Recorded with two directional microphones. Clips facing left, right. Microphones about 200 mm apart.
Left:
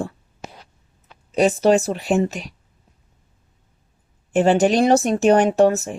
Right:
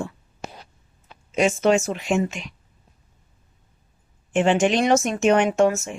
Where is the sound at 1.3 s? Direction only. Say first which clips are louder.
Left 3 dB; 35° left (ahead or behind).